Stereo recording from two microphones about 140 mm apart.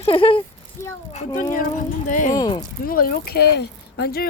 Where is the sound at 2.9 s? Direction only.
90° left.